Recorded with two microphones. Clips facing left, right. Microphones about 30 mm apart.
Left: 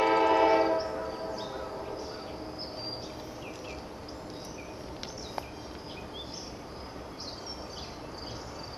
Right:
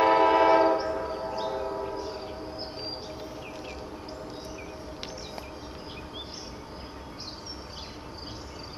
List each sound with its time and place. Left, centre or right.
0.0 s train: centre